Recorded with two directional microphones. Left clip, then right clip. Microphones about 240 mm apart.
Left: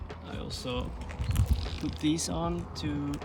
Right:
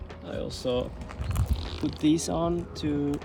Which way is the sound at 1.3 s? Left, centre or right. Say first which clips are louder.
Right 1 dB; centre.